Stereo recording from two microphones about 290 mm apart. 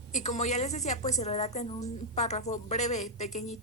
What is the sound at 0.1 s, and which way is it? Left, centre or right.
A woman's voice, left.